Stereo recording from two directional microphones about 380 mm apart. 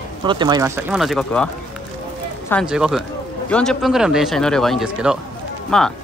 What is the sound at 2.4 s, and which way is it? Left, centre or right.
Speech, centre.